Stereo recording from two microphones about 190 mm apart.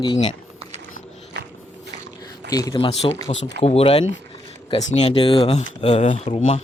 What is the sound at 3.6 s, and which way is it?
Speech, 30° left (ahead or behind).